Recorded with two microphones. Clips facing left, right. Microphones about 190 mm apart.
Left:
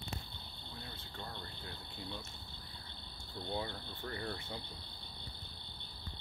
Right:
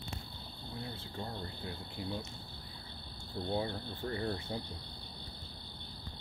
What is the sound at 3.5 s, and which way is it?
Speech, 30° right (ahead or behind).